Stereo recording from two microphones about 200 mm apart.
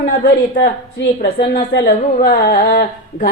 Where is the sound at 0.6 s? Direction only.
50° left (ahead or behind).